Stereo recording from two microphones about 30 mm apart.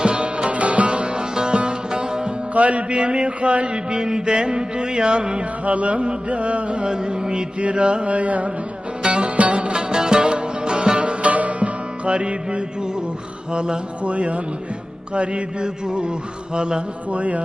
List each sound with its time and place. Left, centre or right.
0.0 s music: right
0.9 s music: right
2.5 s music: right
2.9 s music: right
3.8 s music: right
5.6 s mantra: right
6.2 s music: right
7.6 s mantra: right
9.0 s music: right
9.7 s music: right
11.3 s music: right
14.0 s mantra: right
15.1 s music: right
17.1 s mantra: right